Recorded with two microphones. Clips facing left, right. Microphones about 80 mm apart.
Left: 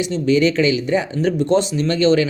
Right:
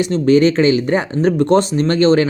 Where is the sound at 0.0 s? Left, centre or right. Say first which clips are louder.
Right 4 dB; right.